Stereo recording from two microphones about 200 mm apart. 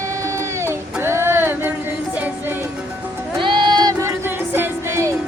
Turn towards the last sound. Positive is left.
turn(degrees=-15)  # may be behind; listen again after turning